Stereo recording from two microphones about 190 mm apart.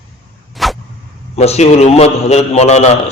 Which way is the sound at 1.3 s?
35° left (ahead or behind).